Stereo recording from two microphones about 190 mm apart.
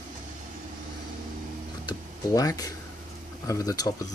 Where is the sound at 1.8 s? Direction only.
20° left (ahead or behind).